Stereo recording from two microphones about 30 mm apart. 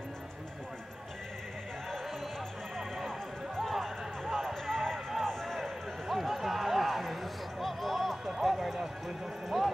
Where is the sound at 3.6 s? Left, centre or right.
Centre.